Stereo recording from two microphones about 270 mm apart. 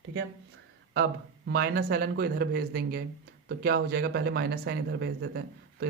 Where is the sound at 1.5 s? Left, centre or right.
Right.